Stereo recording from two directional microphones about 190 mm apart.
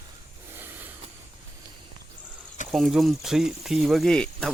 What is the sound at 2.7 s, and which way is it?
Speech, centre (ahead or behind).